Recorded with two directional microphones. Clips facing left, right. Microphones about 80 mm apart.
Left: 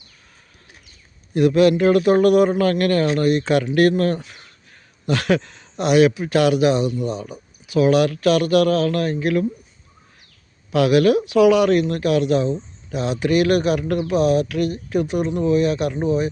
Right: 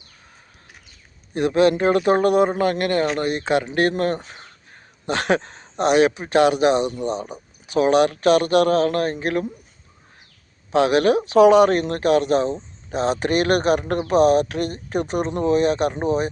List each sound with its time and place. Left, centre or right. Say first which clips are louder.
1.3 s speech: left 2 dB; right
10.7 s speech: left 1 dB; right
12.5 s speech: right 1 dB; right